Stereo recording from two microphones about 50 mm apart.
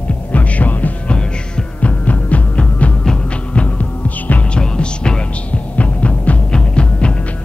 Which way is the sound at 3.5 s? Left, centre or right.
Left.